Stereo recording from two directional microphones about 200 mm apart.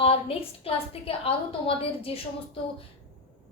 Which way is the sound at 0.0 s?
30° left (ahead or behind).